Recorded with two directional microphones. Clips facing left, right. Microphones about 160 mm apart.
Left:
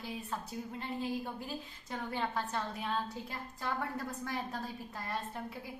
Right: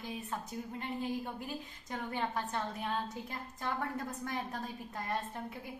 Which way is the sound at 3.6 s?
20° right (ahead or behind).